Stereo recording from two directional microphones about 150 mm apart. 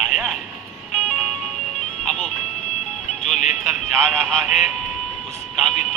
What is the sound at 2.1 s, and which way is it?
Music, centre (ahead or behind).